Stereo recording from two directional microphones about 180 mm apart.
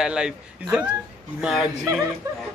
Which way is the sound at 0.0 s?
5° right (ahead or behind).